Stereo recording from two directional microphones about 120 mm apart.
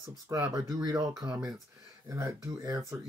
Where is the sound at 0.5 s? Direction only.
30° right (ahead or behind).